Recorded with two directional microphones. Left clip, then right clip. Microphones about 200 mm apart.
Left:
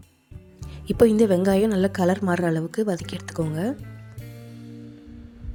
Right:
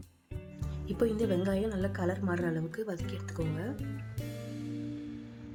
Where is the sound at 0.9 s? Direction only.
45° left (ahead or behind).